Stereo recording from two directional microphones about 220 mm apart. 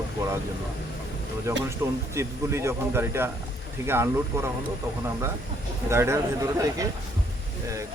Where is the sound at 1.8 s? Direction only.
15° right (ahead or behind).